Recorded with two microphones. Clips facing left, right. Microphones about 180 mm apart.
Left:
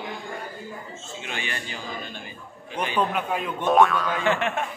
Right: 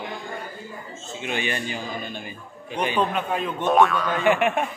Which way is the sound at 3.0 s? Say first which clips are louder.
Left 1 dB; 10° left (ahead or behind).